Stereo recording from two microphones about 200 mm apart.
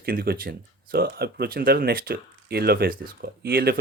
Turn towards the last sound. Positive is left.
turn(degrees=-50)  # may be behind; listen again after turning